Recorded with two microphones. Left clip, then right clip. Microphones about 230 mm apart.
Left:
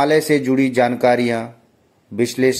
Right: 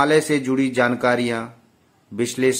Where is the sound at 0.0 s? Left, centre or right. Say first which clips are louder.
Left 2 dB; centre.